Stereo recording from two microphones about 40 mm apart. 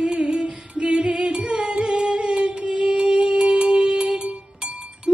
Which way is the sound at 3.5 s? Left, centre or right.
Right.